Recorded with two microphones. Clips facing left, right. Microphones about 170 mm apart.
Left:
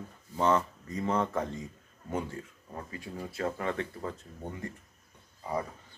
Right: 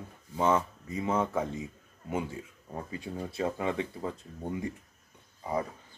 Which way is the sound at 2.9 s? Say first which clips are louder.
Right 3 dB; 25° right (ahead or behind).